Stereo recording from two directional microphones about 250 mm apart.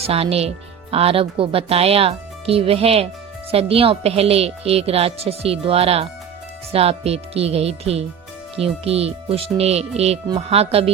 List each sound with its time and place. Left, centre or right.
0.0 s speech: right